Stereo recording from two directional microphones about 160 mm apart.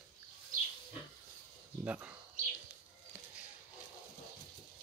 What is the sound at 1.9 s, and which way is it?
Speech, 10° right (ahead or behind).